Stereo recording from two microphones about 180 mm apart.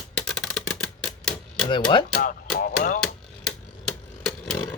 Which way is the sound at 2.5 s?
50° left (ahead or behind).